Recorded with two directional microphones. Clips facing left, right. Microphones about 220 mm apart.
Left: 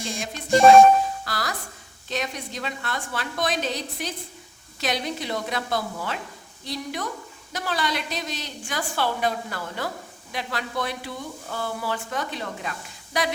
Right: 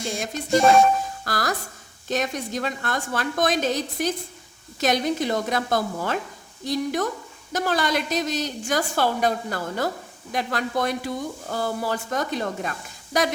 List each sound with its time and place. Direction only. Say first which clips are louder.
0.0 s a woman's voice: right 3 dB; 50° right (ahead or behind)